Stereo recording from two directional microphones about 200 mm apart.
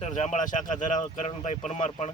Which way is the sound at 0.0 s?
35° left (ahead or behind).